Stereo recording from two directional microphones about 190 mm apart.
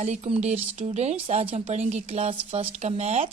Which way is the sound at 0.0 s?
35° right (ahead or behind).